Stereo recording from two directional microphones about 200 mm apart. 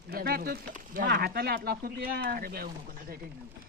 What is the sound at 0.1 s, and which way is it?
Speech, 50° right (ahead or behind).